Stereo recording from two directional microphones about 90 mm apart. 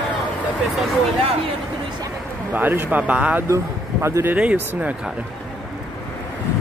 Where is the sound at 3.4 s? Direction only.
35° right (ahead or behind).